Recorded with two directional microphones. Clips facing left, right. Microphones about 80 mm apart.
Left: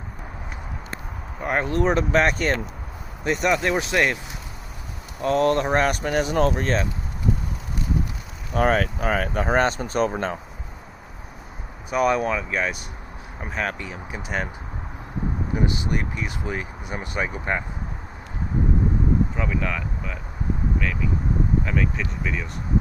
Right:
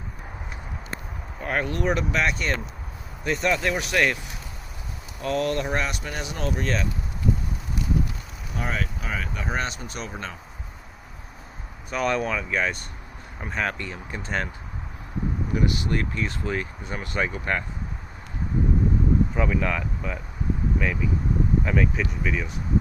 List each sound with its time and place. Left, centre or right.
1.4 s speech: left
3.2 s speech: left
5.2 s speech: left
8.5 s speech: left
11.9 s speech: centre
15.5 s speech: left
19.4 s speech: centre